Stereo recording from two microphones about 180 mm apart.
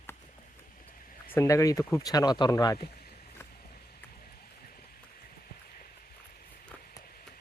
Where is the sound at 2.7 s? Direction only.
60° left (ahead or behind).